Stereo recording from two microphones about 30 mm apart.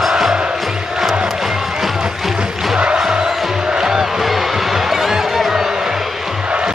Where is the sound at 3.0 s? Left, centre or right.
Centre.